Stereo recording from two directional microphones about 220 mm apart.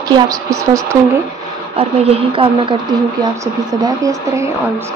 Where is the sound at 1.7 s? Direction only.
25° right (ahead or behind).